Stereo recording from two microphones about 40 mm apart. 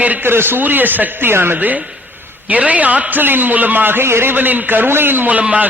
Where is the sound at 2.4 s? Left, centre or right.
Right.